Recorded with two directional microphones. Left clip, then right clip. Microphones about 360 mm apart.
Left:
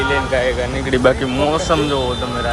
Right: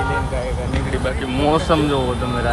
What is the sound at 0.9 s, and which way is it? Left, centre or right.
Speech, left.